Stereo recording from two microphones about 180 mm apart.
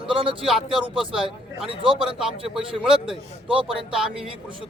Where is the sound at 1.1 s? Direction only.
5° right (ahead or behind).